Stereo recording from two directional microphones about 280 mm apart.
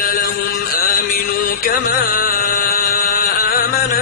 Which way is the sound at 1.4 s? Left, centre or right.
Left.